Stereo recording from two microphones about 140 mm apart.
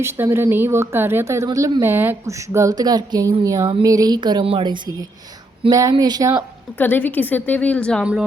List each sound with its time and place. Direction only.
0.0 s a woman's voice: 15° right (ahead or behind)
6.7 s a woman's voice: 15° left (ahead or behind)